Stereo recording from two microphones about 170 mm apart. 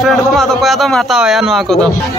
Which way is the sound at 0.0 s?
Centre (ahead or behind).